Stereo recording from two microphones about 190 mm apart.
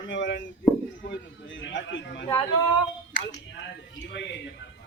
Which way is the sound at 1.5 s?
75° left (ahead or behind).